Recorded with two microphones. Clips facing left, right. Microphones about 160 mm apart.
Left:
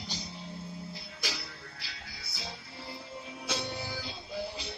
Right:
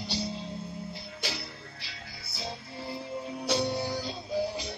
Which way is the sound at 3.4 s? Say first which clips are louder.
Right 8 dB; 35° right (ahead or behind).